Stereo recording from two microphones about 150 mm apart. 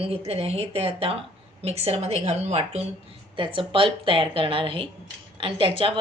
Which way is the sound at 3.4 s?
35° right (ahead or behind).